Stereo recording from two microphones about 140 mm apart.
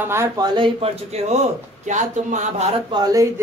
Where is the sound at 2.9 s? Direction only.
25° right (ahead or behind).